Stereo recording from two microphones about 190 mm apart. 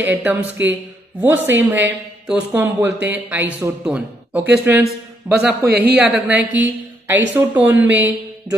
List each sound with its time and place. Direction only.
0.1 s a man's voice: 10° right (ahead or behind)
5.7 s speech: 60° right (ahead or behind)
5.9 s speech: 5° right (ahead or behind)